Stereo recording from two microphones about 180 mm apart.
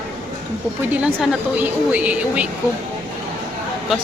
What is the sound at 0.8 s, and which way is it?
Speech, 10° right (ahead or behind).